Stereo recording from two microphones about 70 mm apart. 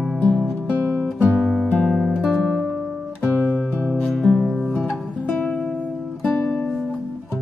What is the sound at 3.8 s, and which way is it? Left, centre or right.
Music, centre.